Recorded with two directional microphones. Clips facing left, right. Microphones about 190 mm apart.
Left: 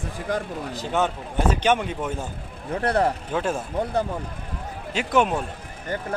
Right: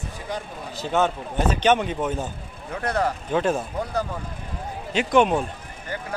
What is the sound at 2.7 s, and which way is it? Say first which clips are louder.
Speech: left 3 dB; 30° left (ahead or behind).